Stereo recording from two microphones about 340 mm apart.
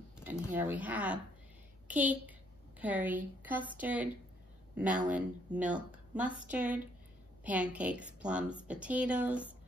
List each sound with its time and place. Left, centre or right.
0.3 s a woman's voice: centre